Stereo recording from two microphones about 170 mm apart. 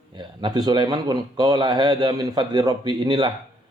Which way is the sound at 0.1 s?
25° right (ahead or behind).